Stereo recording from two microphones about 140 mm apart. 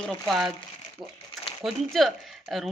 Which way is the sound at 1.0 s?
30° right (ahead or behind).